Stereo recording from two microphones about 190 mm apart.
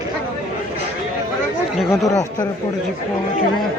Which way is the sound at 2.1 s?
15° left (ahead or behind).